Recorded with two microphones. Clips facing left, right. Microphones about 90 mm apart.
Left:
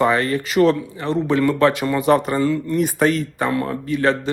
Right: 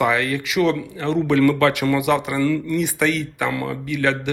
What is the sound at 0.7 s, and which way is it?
Speech, 20° left (ahead or behind).